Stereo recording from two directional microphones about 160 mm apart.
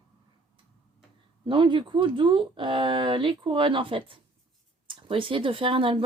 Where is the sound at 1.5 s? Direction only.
30° right (ahead or behind).